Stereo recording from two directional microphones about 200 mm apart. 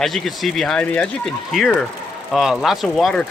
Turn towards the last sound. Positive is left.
turn(degrees=0)  # may be behind; listen again after turning